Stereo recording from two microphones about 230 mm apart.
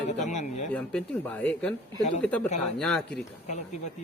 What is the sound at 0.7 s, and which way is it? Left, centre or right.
Speech, centre.